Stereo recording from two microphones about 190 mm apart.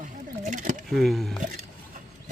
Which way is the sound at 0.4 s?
45° right (ahead or behind).